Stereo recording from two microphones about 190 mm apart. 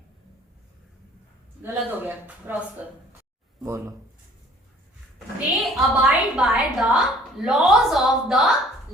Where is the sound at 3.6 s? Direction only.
15° right (ahead or behind).